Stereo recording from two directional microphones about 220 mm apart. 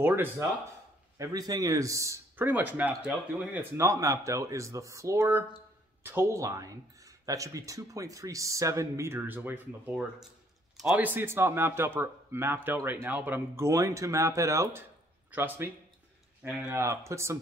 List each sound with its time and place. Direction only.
0.0 s speech: 10° right (ahead or behind)